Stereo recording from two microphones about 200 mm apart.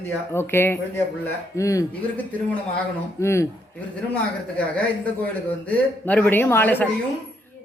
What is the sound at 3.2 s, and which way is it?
Speech, 15° left (ahead or behind).